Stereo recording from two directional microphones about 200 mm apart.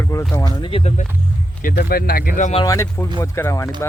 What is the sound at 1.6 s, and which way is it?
Speech, 50° left (ahead or behind).